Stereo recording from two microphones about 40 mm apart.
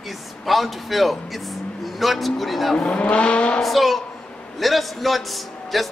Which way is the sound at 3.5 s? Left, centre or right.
Centre.